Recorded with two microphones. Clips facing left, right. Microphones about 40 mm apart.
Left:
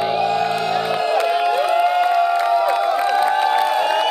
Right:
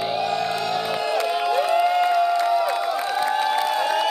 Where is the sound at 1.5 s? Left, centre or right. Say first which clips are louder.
Left 3 dB; left.